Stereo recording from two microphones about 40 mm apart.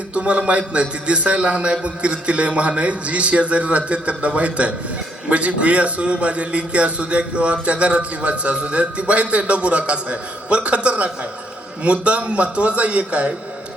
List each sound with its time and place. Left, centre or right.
0.1 s a man's voice: right